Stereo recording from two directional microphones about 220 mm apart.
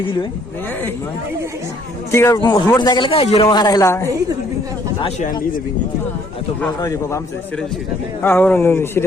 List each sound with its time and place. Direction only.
2.1 s a man's voice: 15° left (ahead or behind)
6.6 s speech: 10° left (ahead or behind)
8.2 s speech: 10° left (ahead or behind)